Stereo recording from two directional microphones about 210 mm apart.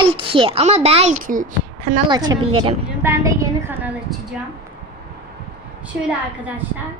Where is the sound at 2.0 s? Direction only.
20° right (ahead or behind).